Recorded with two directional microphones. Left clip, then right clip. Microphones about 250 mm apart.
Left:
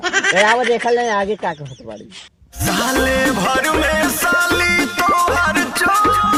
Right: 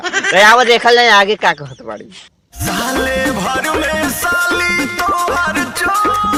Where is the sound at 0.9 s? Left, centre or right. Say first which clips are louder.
Right 8 dB; right.